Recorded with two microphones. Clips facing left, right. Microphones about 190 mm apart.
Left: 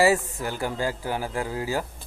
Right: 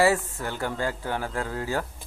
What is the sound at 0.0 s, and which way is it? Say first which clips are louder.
Speech: left 1 dB; 10° left (ahead or behind).